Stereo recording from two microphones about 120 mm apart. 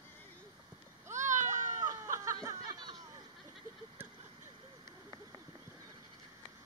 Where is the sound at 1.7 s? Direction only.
30° right (ahead or behind).